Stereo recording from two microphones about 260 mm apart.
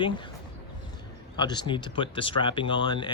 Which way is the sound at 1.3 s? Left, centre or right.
Centre.